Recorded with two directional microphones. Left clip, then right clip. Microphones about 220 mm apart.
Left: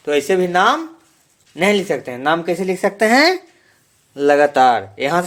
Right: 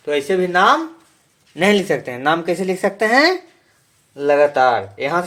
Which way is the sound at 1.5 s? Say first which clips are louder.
Even; 10° left (ahead or behind).